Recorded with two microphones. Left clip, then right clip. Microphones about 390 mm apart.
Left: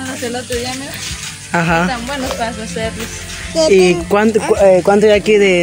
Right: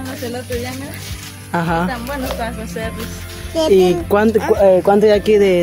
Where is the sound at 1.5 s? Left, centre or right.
Right.